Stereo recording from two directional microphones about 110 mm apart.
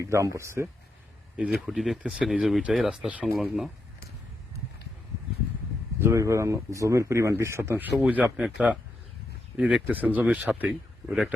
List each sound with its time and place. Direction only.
0.0 s speech: 25° right (ahead or behind)
1.5 s speech: centre (ahead or behind)
6.0 s speech: 25° right (ahead or behind); by 11.3 s 5° right (ahead or behind)